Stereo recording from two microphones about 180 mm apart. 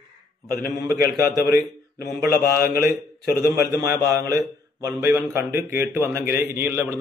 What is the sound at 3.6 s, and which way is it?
A man's voice, 20° right (ahead or behind).